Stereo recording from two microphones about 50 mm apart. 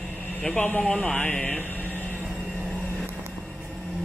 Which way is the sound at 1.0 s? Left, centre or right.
Centre.